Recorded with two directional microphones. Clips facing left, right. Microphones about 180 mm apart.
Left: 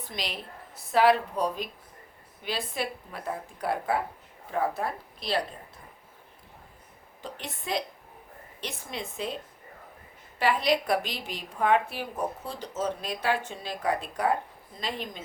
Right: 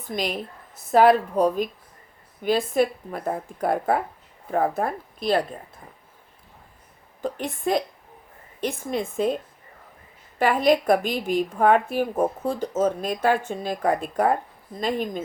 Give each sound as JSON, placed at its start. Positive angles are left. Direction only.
{"t": 0.0, "sound": "a woman's voice", "side_deg": -50}
{"t": 7.2, "sound": "a woman's voice", "side_deg": -50}